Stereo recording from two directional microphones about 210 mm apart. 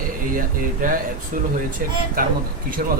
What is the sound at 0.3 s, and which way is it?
Speech, 40° right (ahead or behind).